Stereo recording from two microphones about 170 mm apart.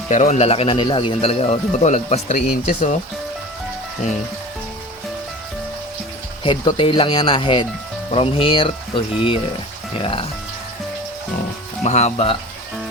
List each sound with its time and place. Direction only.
0.1 s speech: 45° left (ahead or behind)
6.4 s speech: 30° left (ahead or behind)
11.8 s speech: 40° left (ahead or behind)